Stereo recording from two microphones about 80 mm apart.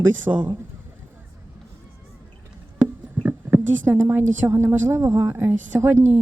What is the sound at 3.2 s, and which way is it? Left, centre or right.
A woman's voice, right.